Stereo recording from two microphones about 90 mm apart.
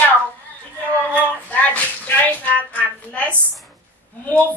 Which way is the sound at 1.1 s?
15° left (ahead or behind).